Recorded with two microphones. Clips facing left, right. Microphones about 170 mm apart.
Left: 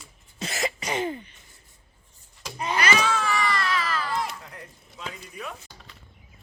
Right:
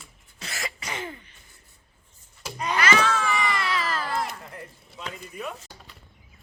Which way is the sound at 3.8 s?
45° right (ahead or behind).